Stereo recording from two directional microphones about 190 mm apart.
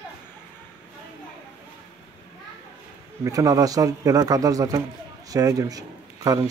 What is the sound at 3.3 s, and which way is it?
Speech, 20° right (ahead or behind).